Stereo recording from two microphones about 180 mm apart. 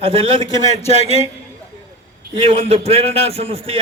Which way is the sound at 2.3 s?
30° right (ahead or behind).